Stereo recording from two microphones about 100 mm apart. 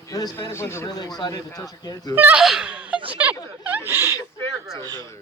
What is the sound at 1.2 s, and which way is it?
Speech, 40° left (ahead or behind).